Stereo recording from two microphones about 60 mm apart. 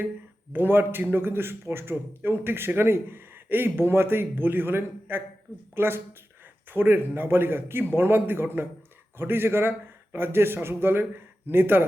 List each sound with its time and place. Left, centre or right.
0.5 s a man's voice: right